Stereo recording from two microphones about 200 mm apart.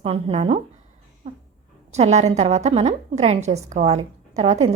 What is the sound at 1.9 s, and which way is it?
A woman's voice, 35° right (ahead or behind).